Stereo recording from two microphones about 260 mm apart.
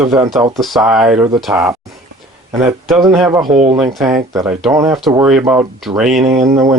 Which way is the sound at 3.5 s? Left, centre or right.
Right.